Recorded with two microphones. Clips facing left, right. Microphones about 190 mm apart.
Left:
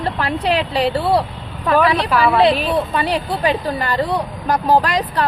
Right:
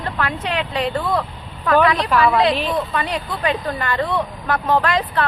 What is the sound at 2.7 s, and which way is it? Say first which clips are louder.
Speech: left 4 dB; 30° left (ahead or behind).